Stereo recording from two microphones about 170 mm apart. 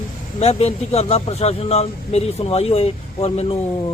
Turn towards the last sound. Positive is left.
turn(degrees=40)  # may be behind; listen again after turning